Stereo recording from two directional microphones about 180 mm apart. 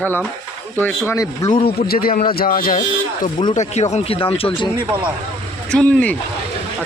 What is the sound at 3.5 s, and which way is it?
Speech, 40° left (ahead or behind).